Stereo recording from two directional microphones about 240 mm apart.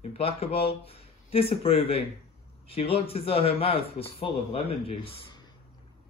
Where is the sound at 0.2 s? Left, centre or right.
Left.